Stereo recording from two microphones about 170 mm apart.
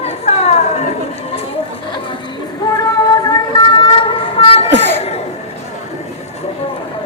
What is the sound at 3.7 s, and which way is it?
Vehicle, 30° left (ahead or behind).